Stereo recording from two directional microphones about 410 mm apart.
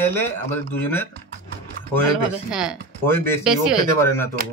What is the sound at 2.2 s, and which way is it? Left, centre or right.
Speech, centre.